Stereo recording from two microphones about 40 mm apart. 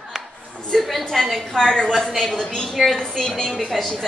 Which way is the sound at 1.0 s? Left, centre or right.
Centre.